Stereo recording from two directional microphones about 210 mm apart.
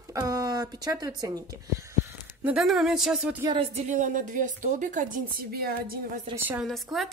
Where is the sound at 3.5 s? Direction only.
30° right (ahead or behind); by 6.2 s 45° right (ahead or behind).